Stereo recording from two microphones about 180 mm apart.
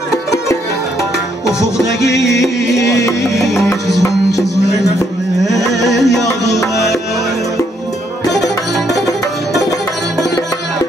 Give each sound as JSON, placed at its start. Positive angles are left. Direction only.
{"t": 2.0, "sound": "music", "side_deg": 70}
{"t": 2.4, "sound": "music", "side_deg": 15}
{"t": 5.4, "sound": "carnatic music", "side_deg": 0}
{"t": 8.3, "sound": "music", "side_deg": 0}